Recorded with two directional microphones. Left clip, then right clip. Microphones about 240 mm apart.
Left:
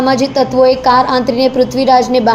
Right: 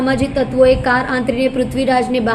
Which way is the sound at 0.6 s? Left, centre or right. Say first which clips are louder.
Left 3 dB; centre.